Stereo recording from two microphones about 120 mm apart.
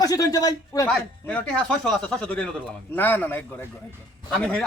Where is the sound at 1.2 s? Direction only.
10° left (ahead or behind).